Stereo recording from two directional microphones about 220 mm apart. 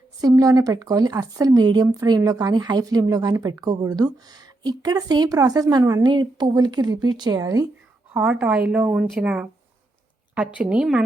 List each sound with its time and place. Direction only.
0.2 s speech: 15° right (ahead or behind)
8.1 s speech: 5° right (ahead or behind)